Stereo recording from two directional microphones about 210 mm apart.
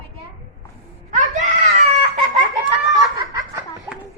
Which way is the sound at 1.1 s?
35° right (ahead or behind).